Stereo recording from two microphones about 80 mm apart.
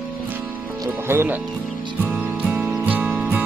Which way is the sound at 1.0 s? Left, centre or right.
Right.